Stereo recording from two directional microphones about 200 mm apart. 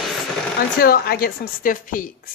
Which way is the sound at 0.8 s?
50° left (ahead or behind).